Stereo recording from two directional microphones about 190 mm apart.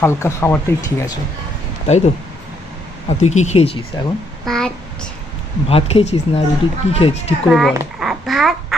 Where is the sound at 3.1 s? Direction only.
35° left (ahead or behind).